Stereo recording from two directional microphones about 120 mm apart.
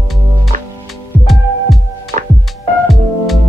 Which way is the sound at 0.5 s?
90° right.